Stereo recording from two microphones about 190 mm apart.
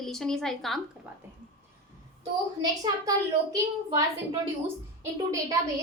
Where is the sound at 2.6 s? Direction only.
20° right (ahead or behind).